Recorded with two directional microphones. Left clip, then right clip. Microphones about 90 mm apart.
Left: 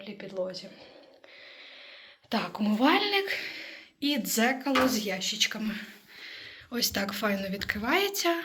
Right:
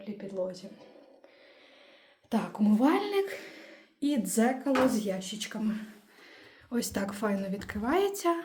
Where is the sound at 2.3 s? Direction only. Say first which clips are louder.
Even; 40° right (ahead or behind); by 5.9 s 90° right.